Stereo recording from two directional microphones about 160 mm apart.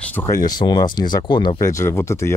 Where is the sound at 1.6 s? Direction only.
20° left (ahead or behind).